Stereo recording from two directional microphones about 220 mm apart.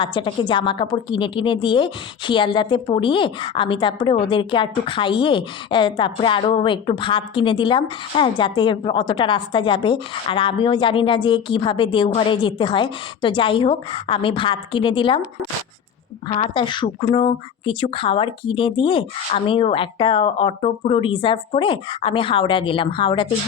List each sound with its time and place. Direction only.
0.0 s a woman's voice: 20° left (ahead or behind)
16.3 s a woman's voice: 25° left (ahead or behind)